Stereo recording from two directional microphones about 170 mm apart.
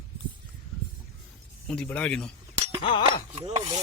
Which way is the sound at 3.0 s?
30° right (ahead or behind).